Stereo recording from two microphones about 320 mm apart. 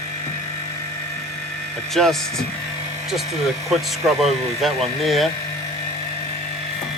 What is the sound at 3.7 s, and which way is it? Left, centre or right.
Speech, centre.